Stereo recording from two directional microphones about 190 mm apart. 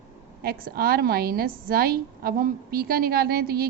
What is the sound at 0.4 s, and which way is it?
A woman's voice, 50° right (ahead or behind).